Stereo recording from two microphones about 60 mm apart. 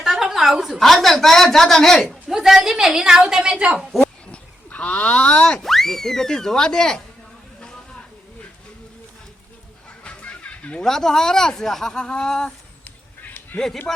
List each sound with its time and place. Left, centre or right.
0.0 s a woman's voice: centre
2.0 s a woman's voice: centre
4.0 s boing: centre
5.6 s speech: centre
7.6 s a sound: centre
10.0 s music: centre
10.8 s speech: centre
13.2 s a sound: left